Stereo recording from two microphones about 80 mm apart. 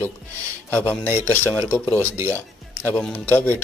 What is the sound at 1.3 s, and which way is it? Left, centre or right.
Speech, left.